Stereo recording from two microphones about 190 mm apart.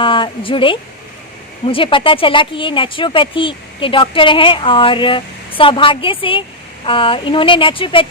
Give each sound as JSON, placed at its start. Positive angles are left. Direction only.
{"t": 0.0, "sound": "speech", "side_deg": 25}